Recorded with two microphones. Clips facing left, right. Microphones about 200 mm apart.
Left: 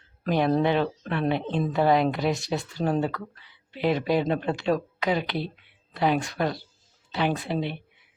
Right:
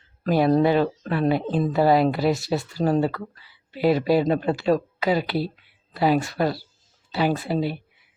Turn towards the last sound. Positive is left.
turn(degrees=-5)  # may be behind; listen again after turning